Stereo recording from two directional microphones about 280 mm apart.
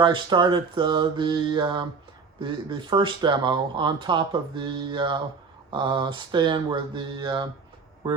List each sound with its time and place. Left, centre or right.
0.0 s speech: centre